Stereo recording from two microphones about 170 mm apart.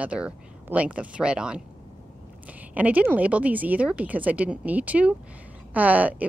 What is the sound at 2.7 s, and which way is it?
Speech, 10° right (ahead or behind).